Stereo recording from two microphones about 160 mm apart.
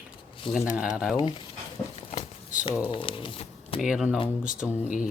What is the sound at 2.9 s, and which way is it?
Speech, 35° left (ahead or behind).